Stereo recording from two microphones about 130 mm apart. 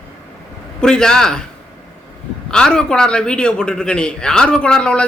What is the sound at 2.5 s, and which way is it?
A woman's voice, 5° left (ahead or behind).